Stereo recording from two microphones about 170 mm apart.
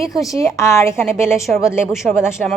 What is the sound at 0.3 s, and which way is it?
Speech, 15° left (ahead or behind).